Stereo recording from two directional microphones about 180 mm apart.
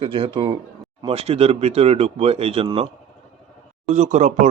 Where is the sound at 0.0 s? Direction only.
30° right (ahead or behind).